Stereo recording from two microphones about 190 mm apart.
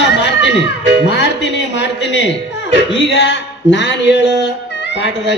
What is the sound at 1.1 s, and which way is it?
A man's voice, 65° left (ahead or behind).